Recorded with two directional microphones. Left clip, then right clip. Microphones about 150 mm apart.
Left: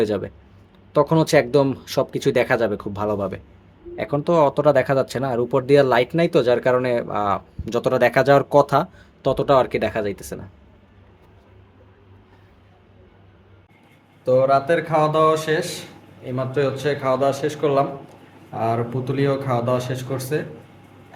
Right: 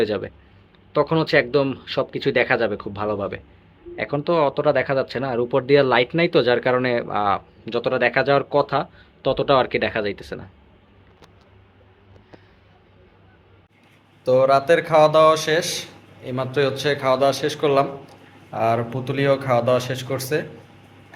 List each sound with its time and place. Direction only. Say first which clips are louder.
0.0 s speech: even; 30° left (ahead or behind)
7.6 s speech: left 3 dB; 40° left (ahead or behind); by 10.4 s 25° left (ahead or behind)
14.3 s a man's voice: right 1 dB; 5° left (ahead or behind)